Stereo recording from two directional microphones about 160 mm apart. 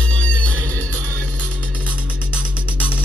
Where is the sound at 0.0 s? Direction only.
10° left (ahead or behind).